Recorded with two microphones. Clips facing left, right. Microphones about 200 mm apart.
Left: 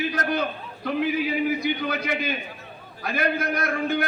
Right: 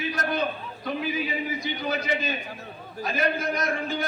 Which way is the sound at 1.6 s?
60° left (ahead or behind).